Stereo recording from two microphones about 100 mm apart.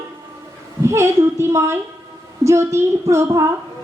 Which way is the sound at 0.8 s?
30° right (ahead or behind).